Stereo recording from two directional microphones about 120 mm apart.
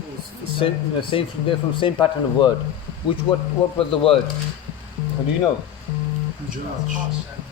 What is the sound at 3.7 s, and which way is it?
Speech, 50° left (ahead or behind).